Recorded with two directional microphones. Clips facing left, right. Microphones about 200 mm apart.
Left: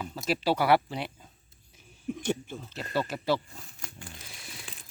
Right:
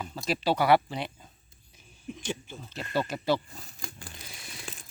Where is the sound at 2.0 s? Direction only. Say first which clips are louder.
Left 5 dB; 60° left (ahead or behind).